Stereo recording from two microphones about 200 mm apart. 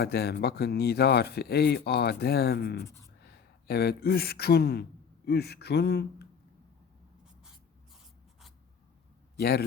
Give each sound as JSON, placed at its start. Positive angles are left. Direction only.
{"t": 0.0, "sound": "speech", "side_deg": 55}
{"t": 2.8, "sound": "a sound", "side_deg": 15}
{"t": 3.2, "sound": "speech", "side_deg": 50}
{"t": 9.4, "sound": "speech", "side_deg": 50}